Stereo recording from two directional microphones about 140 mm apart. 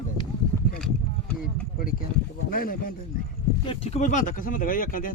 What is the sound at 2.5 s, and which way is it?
Speech, 90° left.